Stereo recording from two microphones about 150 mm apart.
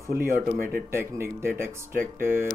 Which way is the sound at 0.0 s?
15° right (ahead or behind).